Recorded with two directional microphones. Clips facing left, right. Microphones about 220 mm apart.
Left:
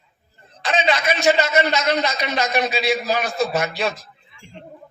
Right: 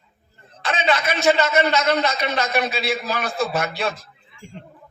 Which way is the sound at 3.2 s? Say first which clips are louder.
Left 2 dB; 55° right (ahead or behind).